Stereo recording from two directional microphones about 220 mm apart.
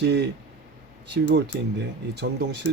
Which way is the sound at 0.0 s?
50° right (ahead or behind).